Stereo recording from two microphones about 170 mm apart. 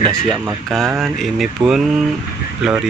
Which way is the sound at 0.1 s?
20° right (ahead or behind).